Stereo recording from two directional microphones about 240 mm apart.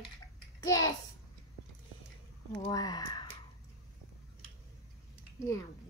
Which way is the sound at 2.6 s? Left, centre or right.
Centre.